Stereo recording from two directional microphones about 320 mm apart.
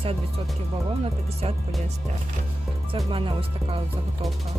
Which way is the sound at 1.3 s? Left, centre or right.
Centre.